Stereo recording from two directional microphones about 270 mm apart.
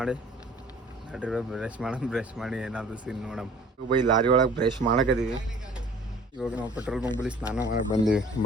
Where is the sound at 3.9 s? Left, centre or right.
Centre.